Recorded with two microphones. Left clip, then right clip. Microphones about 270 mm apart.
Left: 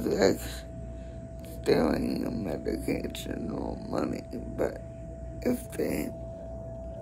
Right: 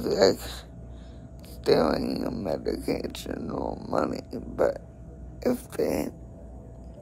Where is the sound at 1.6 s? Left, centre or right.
Centre.